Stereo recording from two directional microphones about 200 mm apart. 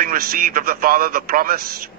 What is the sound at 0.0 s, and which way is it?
Speech, 45° right (ahead or behind).